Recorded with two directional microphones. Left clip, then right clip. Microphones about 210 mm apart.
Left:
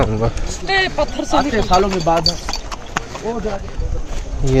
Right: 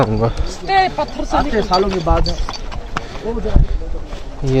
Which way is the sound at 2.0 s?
30° left (ahead or behind).